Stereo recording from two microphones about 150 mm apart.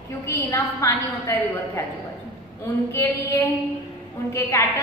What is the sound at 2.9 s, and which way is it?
Female singing, 15° left (ahead or behind).